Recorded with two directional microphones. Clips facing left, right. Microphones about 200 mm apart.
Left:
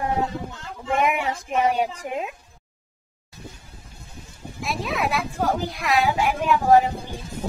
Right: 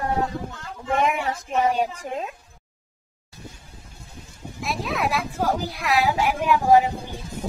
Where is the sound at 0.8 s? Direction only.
10° left (ahead or behind).